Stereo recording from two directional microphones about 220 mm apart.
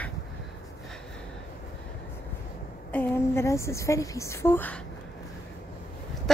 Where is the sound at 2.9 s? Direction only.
10° left (ahead or behind).